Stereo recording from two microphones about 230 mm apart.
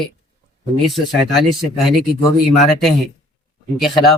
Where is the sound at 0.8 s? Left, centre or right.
Centre.